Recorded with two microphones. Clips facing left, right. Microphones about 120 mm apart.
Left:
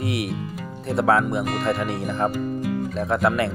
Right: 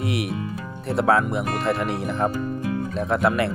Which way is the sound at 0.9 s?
Centre (ahead or behind).